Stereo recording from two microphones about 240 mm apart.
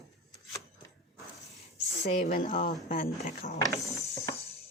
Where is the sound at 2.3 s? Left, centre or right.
Left.